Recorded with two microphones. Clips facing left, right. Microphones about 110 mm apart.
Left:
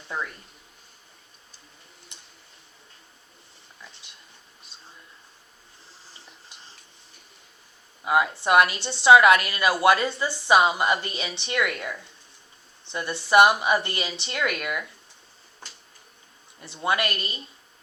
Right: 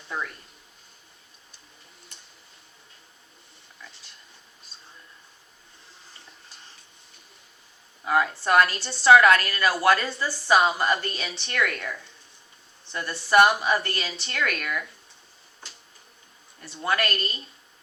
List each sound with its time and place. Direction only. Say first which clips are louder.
2.1 s tick-tock: left 1 dB; 20° left (ahead or behind)
6.5 s stir: left 1 dB; 20° left (ahead or behind)
8.0 s a woman's voice: left 1 dB; 15° left (ahead or behind)
16.6 s a woman's voice: left 1 dB; 20° left (ahead or behind)